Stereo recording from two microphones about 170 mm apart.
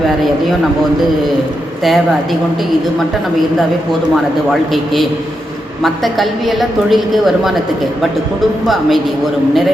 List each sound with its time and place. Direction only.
5.8 s a woman's voice: centre (ahead or behind)
8.6 s a woman's voice: centre (ahead or behind)